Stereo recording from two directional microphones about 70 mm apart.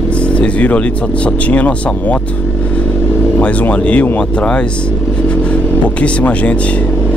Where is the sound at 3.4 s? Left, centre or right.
Centre.